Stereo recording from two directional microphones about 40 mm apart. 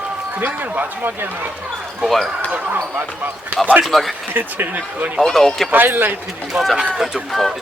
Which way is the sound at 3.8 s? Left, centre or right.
Centre.